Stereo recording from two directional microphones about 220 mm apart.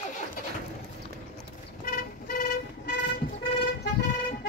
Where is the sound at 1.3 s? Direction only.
40° left (ahead or behind).